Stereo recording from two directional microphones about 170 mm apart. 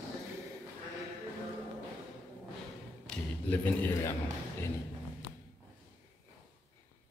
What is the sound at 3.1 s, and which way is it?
A man's voice, 10° left (ahead or behind).